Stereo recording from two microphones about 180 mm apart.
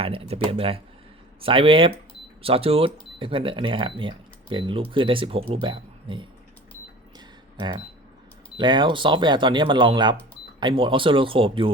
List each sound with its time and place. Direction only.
0.0 s speech: 30° right (ahead or behind)
7.5 s speech: 25° right (ahead or behind)